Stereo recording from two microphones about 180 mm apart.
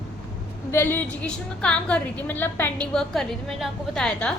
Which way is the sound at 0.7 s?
10° left (ahead or behind).